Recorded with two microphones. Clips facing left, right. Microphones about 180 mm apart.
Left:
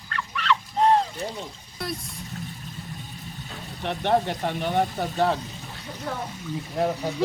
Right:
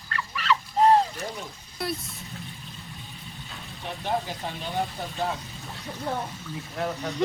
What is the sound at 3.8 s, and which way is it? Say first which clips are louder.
Speech: left 6 dB; 70° left (ahead or behind).